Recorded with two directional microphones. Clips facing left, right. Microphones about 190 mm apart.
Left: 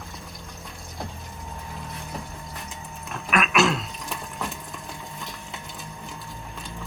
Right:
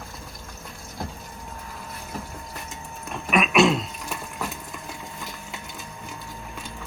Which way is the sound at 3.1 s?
Centre (ahead or behind).